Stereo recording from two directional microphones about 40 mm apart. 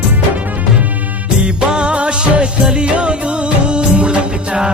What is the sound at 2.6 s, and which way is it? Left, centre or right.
Music of bollywood, right.